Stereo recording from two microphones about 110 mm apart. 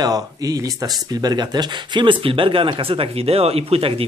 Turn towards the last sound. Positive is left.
turn(degrees=-60)  # may be behind; listen again after turning